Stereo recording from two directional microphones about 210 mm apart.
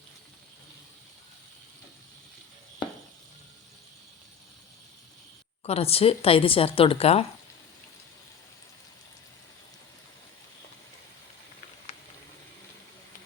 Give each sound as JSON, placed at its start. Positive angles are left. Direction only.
{"t": 5.6, "sound": "speech", "side_deg": 30}